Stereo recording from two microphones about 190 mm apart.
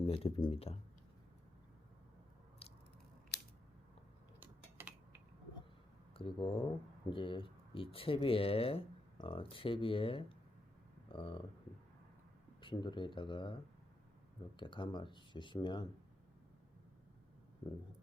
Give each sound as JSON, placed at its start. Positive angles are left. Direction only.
{"t": 0.0, "sound": "speech", "side_deg": 30}
{"t": 4.4, "sound": "typing", "side_deg": -10}
{"t": 6.1, "sound": "speech", "side_deg": 30}
{"t": 12.6, "sound": "speech", "side_deg": 25}